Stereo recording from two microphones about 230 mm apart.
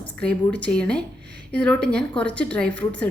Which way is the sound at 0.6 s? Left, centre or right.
Centre.